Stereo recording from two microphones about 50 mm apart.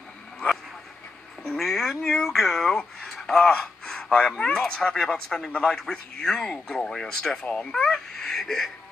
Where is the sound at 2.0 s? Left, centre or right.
Centre.